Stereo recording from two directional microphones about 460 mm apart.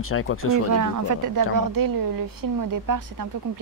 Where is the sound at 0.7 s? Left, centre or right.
Right.